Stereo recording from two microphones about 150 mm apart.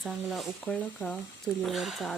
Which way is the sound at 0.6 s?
10° left (ahead or behind).